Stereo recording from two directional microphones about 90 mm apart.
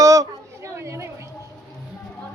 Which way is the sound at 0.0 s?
40° right (ahead or behind).